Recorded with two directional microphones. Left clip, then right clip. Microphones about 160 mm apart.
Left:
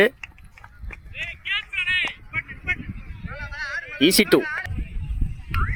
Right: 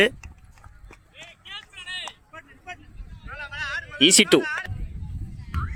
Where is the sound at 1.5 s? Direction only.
55° right (ahead or behind).